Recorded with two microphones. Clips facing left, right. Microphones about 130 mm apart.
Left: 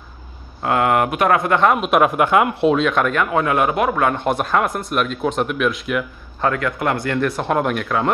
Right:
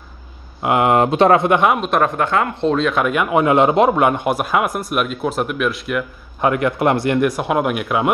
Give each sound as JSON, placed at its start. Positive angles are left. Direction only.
{"t": 0.6, "sound": "speech", "side_deg": -20}
{"t": 1.8, "sound": "speech", "side_deg": 5}
{"t": 6.4, "sound": "speech", "side_deg": -20}